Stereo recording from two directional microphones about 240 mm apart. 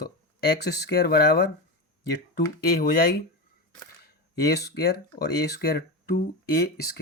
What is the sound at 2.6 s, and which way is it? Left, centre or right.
Speech, left.